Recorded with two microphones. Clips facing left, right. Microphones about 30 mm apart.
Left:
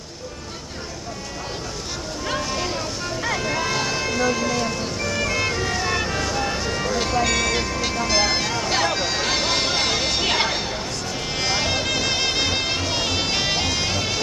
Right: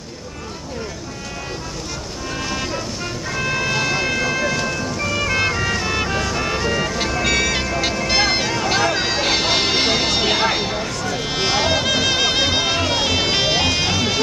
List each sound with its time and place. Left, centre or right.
2.3 s vehicle: centre
3.3 s a sound: right
4.6 s music: right
7.2 s vehicle: right
7.5 s music: right
8.1 s vehicle: right
8.8 s a sound: right
9.2 s music: right
10.2 s music: right
11.1 s music: right